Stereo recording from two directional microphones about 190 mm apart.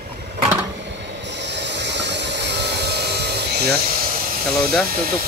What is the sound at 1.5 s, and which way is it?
Train, 65° right (ahead or behind).